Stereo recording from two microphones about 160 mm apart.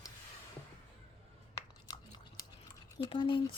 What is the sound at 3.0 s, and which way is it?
Speech, 30° left (ahead or behind).